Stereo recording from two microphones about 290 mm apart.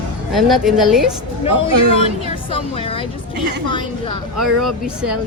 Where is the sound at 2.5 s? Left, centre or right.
Centre.